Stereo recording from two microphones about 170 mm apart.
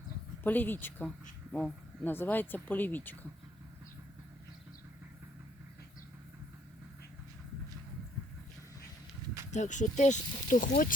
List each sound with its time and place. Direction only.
0.4 s speech: 10° left (ahead or behind)
9.5 s speech: 45° left (ahead or behind)